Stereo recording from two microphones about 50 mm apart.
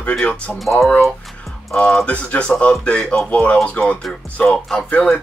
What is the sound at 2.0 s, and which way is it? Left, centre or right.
Speech, left.